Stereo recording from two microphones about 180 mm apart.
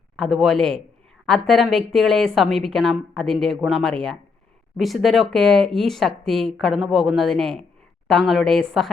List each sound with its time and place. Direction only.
0.2 s a woman's voice: centre (ahead or behind)